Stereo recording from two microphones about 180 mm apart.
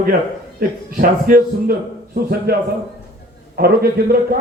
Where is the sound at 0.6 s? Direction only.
50° right (ahead or behind).